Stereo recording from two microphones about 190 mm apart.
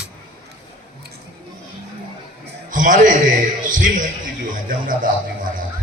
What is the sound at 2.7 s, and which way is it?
A man's voice, 45° right (ahead or behind).